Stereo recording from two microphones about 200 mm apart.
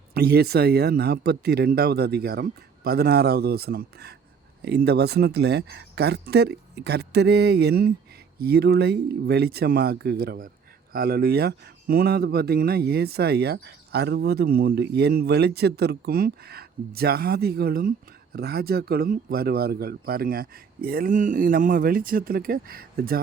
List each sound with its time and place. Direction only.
0.1 s speech: 50° right (ahead or behind)